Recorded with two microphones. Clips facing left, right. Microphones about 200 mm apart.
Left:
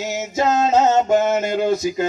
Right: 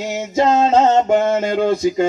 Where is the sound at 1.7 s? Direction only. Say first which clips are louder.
Right 3 dB; 30° right (ahead or behind).